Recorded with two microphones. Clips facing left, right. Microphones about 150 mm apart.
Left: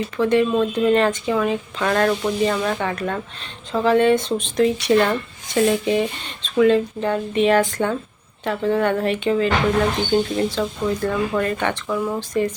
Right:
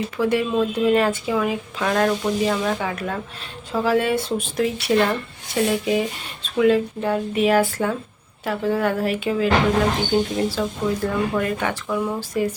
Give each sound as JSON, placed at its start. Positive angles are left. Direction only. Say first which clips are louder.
{"t": 0.2, "sound": "speech", "louder": "left 3 dB", "side_deg": -10}